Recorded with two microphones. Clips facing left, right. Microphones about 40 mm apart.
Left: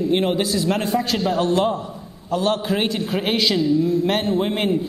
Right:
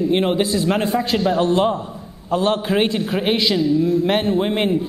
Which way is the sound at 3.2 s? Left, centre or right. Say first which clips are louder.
Right 1 dB; centre.